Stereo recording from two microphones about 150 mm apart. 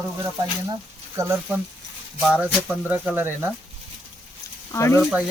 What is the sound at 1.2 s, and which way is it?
Speech, 20° right (ahead or behind).